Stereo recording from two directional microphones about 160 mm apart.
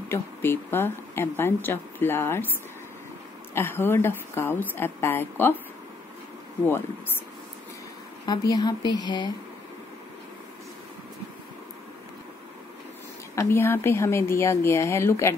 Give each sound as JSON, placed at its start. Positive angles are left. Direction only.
{"t": 0.1, "sound": "speech", "side_deg": 15}
{"t": 3.5, "sound": "speech", "side_deg": 15}
{"t": 8.3, "sound": "a woman's voice", "side_deg": 25}
{"t": 13.3, "sound": "speech", "side_deg": 15}